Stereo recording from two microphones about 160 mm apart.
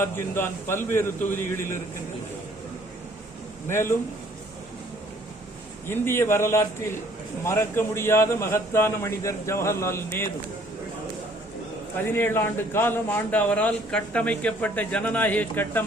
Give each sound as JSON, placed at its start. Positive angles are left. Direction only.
{"t": 0.0, "sound": "a man's voice", "side_deg": 15}
{"t": 3.7, "sound": "a man's voice", "side_deg": 15}
{"t": 5.9, "sound": "a man's voice", "side_deg": 15}
{"t": 11.9, "sound": "a man's voice", "side_deg": 15}